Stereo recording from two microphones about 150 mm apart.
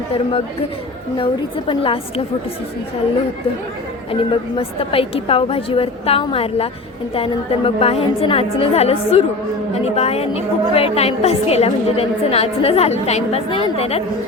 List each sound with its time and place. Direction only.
1.2 s a woman's voice: 35° left (ahead or behind)
4.1 s a woman's voice: 40° left (ahead or behind)